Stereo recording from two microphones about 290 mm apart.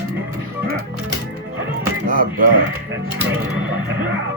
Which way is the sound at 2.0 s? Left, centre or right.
Right.